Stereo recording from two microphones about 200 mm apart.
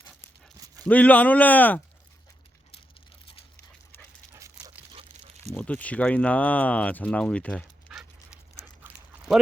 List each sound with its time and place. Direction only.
0.9 s speech: 5° left (ahead or behind)
4.3 s dog: 15° right (ahead or behind)
4.9 s a sound: 30° right (ahead or behind)
5.5 s speech: 5° left (ahead or behind)
7.9 s dog: 5° right (ahead or behind)
8.6 s a sound: 5° right (ahead or behind)